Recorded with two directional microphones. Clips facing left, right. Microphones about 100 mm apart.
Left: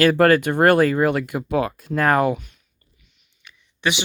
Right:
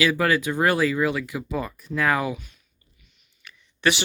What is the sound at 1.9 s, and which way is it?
Speech, 50° left (ahead or behind).